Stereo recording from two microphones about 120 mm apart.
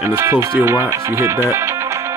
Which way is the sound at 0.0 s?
20° right (ahead or behind).